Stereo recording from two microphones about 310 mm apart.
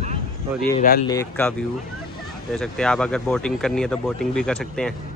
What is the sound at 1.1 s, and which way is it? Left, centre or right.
Speech, centre.